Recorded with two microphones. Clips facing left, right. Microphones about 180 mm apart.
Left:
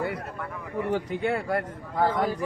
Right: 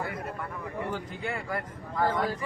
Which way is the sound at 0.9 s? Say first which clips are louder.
Left 12 dB; 65° left (ahead or behind).